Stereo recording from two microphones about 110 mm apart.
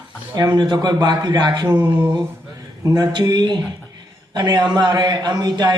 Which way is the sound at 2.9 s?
40° right (ahead or behind).